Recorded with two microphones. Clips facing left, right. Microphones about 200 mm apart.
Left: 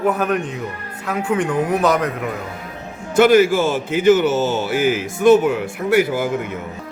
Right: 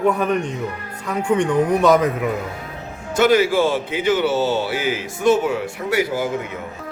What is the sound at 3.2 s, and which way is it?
A man's voice, 50° left (ahead or behind).